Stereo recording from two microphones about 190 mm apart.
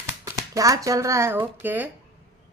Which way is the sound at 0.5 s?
15° right (ahead or behind).